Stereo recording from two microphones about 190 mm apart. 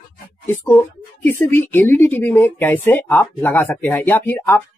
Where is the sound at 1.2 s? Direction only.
10° left (ahead or behind).